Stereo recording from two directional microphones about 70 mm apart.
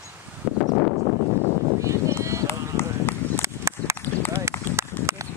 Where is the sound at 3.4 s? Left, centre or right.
Right.